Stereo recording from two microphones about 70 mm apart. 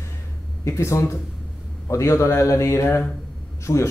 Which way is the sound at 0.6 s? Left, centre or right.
Left.